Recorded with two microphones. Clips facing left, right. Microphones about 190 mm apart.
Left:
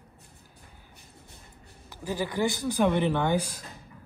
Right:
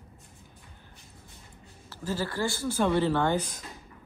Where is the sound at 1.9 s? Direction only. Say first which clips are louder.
Left 1 dB; 15° left (ahead or behind).